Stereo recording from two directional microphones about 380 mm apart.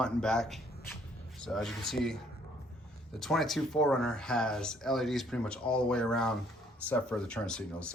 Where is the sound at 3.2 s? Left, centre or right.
Centre.